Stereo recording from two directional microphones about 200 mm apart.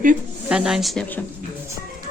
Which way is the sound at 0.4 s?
5° right (ahead or behind).